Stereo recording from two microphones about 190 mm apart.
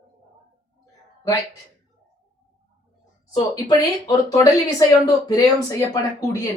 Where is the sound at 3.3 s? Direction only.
20° left (ahead or behind).